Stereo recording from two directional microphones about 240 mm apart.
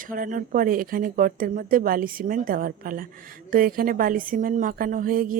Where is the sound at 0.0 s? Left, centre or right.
Right.